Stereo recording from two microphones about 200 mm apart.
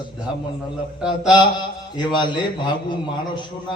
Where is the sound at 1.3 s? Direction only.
20° left (ahead or behind).